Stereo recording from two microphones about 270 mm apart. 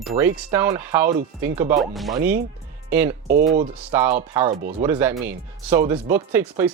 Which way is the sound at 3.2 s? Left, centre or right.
Right.